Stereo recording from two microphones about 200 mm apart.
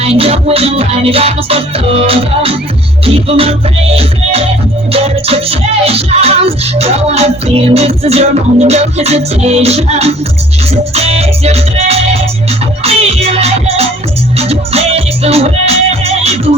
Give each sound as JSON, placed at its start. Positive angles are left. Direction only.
{"t": 0.0, "sound": "music", "side_deg": -30}